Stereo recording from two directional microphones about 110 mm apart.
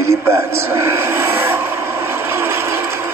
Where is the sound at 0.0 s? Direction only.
25° right (ahead or behind).